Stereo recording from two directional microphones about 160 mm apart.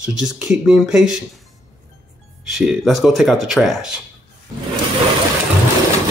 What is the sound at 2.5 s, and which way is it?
Speech, centre (ahead or behind).